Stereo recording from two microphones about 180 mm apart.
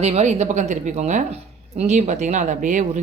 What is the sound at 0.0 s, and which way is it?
A woman's voice, 40° right (ahead or behind).